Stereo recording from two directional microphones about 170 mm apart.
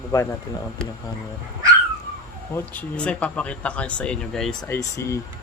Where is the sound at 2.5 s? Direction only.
10° left (ahead or behind).